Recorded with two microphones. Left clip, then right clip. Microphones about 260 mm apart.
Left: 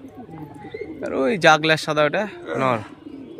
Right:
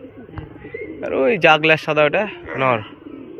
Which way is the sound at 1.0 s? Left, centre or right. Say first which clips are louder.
Right 4 dB; centre.